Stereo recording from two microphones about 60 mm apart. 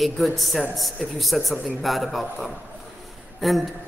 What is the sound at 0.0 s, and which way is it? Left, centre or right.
A man's voice, centre.